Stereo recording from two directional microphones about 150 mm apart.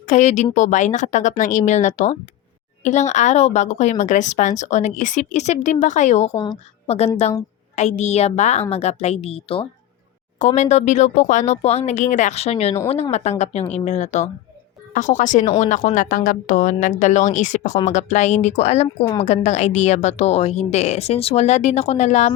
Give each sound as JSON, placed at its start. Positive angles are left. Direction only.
{"t": 0.1, "sound": "speech", "side_deg": 50}
{"t": 6.3, "sound": "a woman's voice", "side_deg": 30}
{"t": 6.8, "sound": "a woman's voice", "side_deg": 45}
{"t": 10.3, "sound": "speech", "side_deg": 55}